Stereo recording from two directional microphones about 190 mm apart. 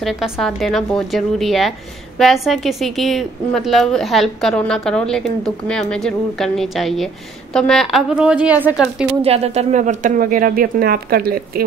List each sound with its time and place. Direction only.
0.0 s a woman's voice: centre (ahead or behind)
9.2 s speech: 35° right (ahead or behind); by 11.6 s 50° right (ahead or behind)